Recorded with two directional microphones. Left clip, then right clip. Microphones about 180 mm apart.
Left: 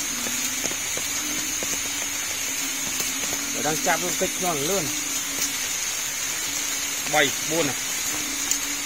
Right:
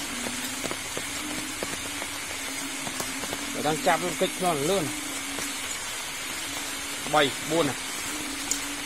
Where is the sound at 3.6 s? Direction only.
Centre (ahead or behind).